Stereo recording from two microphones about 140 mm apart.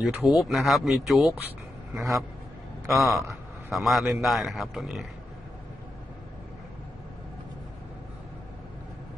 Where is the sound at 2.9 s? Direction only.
Centre (ahead or behind).